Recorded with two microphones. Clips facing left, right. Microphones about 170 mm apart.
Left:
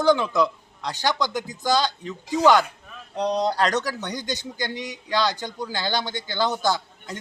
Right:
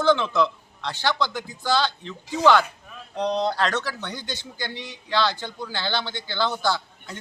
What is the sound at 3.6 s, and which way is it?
Speech, 40° left (ahead or behind).